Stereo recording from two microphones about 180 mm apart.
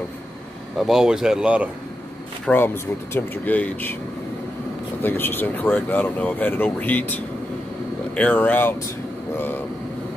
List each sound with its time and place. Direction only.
0.7 s speech: centre (ahead or behind)
2.4 s speech: 10° left (ahead or behind)
5.0 s speech: 10° left (ahead or behind)
8.2 s speech: 10° left (ahead or behind)